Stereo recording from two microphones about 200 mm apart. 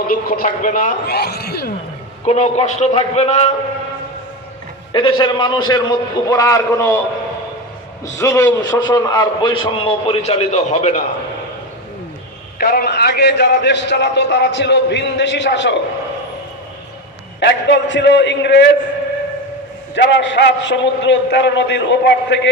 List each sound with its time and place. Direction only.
0.1 s a man's voice: 45° left (ahead or behind)
2.2 s a man's voice: 35° left (ahead or behind)
4.9 s a man's voice: 25° left (ahead or behind)
8.2 s a man's voice: 15° left (ahead or behind); by 11.0 s 35° left (ahead or behind)
12.5 s a man's voice: 50° left (ahead or behind)
17.4 s a man's voice: 65° left (ahead or behind)
20.1 s a man's voice: 65° left (ahead or behind)